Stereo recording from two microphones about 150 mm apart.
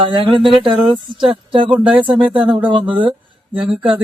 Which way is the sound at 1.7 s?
10° right (ahead or behind).